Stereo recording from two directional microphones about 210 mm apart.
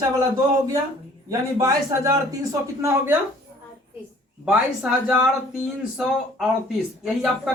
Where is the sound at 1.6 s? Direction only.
15° right (ahead or behind).